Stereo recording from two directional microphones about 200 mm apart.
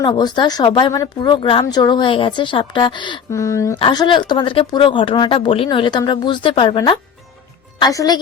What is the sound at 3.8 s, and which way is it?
A woman's voice, 25° left (ahead or behind).